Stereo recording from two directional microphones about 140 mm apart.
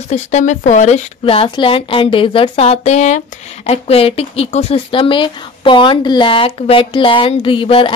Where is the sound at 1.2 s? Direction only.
40° left (ahead or behind).